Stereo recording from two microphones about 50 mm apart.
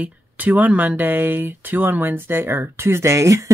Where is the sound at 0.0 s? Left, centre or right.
Right.